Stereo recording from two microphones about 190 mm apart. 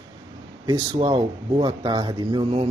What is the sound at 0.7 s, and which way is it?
Speech, 25° right (ahead or behind).